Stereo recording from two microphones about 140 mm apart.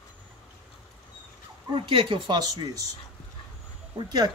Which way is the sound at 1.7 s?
35° right (ahead or behind).